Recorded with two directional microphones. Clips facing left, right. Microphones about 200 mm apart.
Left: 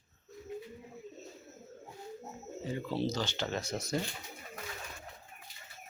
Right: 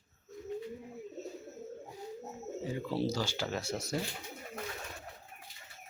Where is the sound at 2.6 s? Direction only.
10° right (ahead or behind).